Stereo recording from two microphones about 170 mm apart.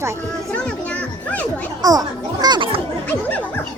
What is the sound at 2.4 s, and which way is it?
Children playing, 25° right (ahead or behind).